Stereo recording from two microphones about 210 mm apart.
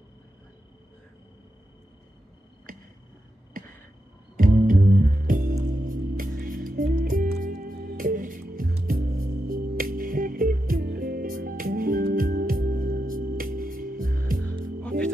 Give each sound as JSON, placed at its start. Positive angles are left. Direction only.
{"t": 4.4, "sound": "music", "side_deg": -40}
{"t": 14.8, "sound": "music", "side_deg": 5}